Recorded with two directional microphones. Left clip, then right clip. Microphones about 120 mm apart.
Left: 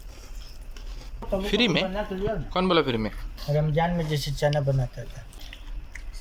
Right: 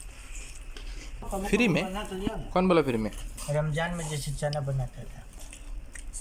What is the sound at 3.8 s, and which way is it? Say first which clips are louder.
Speech: left 6 dB; 90° left.